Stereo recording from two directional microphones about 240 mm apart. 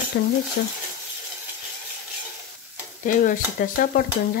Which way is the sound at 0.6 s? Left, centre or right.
Left.